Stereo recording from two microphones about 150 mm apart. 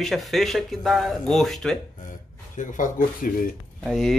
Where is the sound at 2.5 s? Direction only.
60° left (ahead or behind).